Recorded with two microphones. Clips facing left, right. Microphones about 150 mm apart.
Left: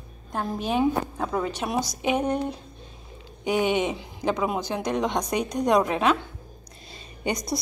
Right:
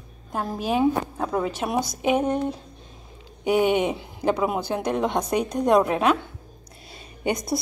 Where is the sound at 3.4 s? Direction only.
10° right (ahead or behind).